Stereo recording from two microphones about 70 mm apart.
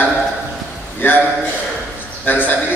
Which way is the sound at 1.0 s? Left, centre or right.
Left.